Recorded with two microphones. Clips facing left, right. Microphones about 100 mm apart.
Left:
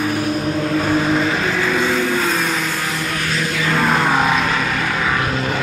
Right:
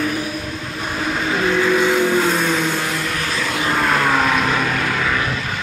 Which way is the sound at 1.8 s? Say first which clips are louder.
Right 2 dB; 15° right (ahead or behind).